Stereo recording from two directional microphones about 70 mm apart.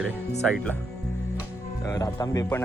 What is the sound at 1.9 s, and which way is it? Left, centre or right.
Speech, left.